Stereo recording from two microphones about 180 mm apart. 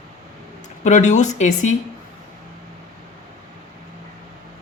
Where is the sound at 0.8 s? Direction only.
40° left (ahead or behind).